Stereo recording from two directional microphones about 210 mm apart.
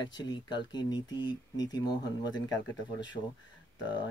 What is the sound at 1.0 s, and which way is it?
Speech, 60° left (ahead or behind).